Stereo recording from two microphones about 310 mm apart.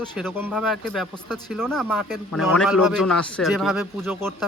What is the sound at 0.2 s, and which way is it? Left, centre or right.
A man's voice, centre.